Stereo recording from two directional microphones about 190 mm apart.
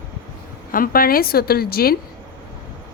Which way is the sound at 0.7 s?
50° left (ahead or behind).